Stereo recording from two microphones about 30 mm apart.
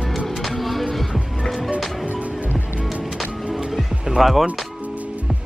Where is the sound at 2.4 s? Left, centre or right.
Right.